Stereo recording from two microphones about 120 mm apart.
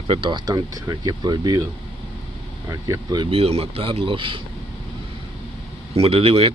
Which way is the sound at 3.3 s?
55° right (ahead or behind).